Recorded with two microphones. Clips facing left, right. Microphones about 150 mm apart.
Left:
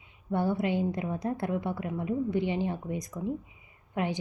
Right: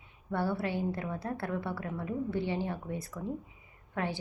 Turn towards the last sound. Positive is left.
turn(degrees=15)  # may be behind; listen again after turning